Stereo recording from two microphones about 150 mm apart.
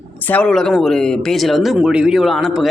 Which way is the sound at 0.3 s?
5° left (ahead or behind).